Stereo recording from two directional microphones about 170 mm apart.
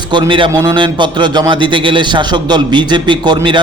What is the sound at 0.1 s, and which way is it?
A man's voice, 30° right (ahead or behind).